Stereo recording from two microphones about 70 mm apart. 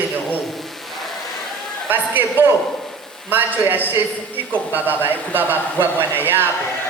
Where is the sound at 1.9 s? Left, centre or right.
Right.